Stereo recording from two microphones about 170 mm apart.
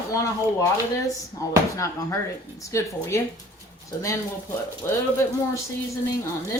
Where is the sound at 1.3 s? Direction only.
20° left (ahead or behind).